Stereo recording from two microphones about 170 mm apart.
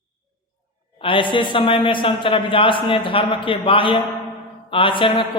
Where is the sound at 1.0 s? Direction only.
30° left (ahead or behind).